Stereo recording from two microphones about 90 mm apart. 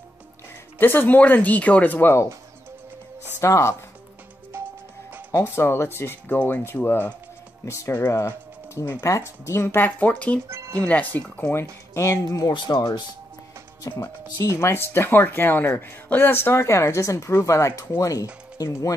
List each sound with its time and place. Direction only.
0.7 s speech: 25° left (ahead or behind)
3.3 s speech: 35° left (ahead or behind)
4.5 s music: 25° right (ahead or behind)
5.3 s speech: 25° left (ahead or behind)
7.6 s speech: 35° left (ahead or behind); by 10.4 s 15° left (ahead or behind)
10.5 s music: 35° right (ahead or behind)
10.8 s speech: 15° left (ahead or behind)
11.9 s speech: 35° left (ahead or behind)